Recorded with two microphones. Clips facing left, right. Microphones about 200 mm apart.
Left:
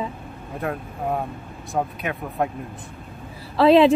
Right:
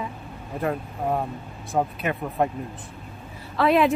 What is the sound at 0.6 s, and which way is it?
Speech, centre (ahead or behind).